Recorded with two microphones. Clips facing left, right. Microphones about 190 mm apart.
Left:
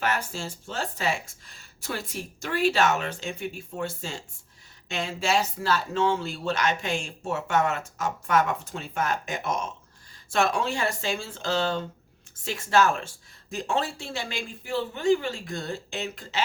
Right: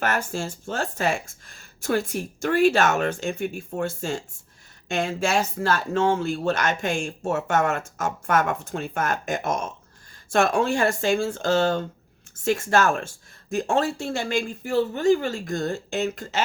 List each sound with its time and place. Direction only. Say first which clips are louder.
0.0 s speech: right 3 dB; 50° right (ahead or behind)